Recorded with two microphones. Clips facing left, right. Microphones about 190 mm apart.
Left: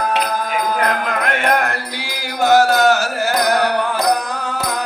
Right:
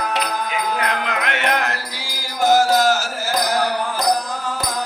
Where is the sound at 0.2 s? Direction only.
45° left (ahead or behind).